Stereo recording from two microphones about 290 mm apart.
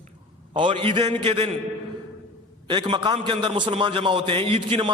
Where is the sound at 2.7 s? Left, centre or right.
Centre.